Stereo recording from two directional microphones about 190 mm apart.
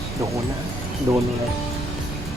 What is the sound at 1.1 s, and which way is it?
Music, 15° right (ahead or behind).